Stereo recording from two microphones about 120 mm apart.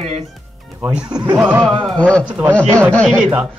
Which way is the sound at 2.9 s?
10° left (ahead or behind).